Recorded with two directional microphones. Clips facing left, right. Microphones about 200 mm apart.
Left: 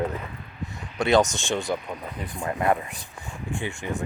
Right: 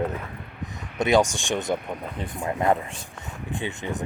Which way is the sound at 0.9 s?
15° right (ahead or behind).